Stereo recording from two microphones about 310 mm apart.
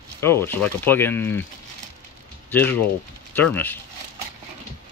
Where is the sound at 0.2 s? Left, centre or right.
Centre.